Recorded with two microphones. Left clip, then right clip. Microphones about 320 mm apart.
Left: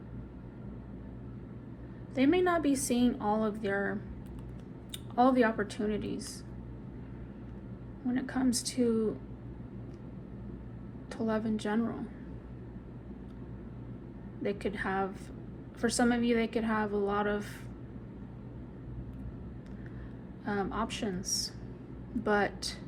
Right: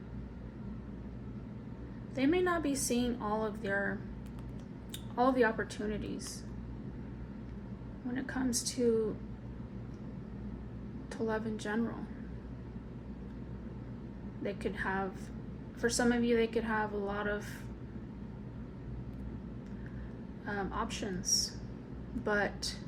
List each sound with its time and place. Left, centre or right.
2.1 s a woman's voice: left
5.1 s a woman's voice: left
8.1 s a woman's voice: left
11.3 s a woman's voice: left
14.4 s a woman's voice: left
20.4 s a woman's voice: left